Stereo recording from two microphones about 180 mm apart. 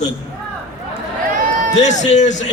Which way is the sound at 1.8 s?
40° left (ahead or behind).